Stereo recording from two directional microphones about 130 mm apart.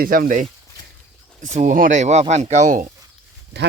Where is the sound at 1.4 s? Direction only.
75° right (ahead or behind).